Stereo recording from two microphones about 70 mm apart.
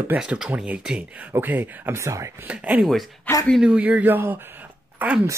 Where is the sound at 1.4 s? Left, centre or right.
Right.